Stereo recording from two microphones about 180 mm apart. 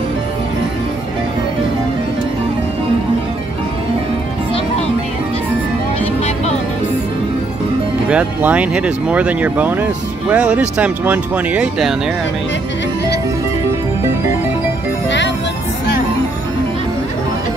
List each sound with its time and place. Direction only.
6.2 s music: 35° left (ahead or behind)
8.1 s speech: 10° right (ahead or behind)
15.0 s music: 80° left